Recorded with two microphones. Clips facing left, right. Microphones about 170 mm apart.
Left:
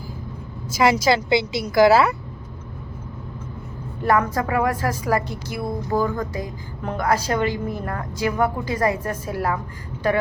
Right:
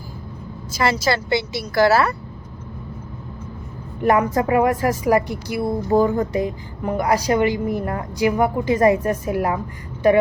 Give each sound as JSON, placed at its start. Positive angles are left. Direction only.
{"t": 0.8, "sound": "speech", "side_deg": 15}
{"t": 4.0, "sound": "a woman's voice", "side_deg": -20}